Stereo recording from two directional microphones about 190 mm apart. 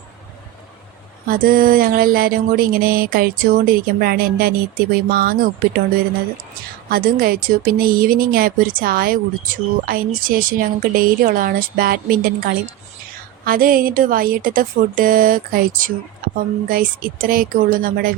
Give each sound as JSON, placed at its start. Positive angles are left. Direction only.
{"t": 1.3, "sound": "speech", "side_deg": -50}
{"t": 6.9, "sound": "speech", "side_deg": -50}